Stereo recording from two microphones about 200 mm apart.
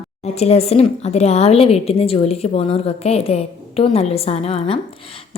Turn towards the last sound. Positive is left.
turn(degrees=30)  # may be behind; listen again after turning